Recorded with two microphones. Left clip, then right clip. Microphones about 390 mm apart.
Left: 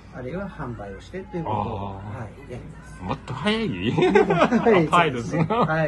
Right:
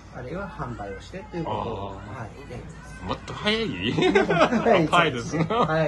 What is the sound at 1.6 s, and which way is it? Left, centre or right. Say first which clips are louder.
Speech: left 2 dB; centre.